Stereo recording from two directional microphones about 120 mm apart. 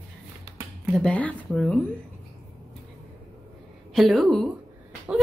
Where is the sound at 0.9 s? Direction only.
10° left (ahead or behind).